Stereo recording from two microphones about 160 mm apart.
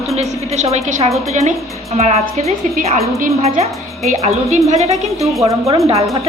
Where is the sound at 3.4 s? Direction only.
40° right (ahead or behind).